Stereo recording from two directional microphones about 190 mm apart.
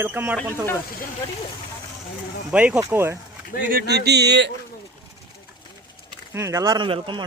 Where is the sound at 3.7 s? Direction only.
55° right (ahead or behind).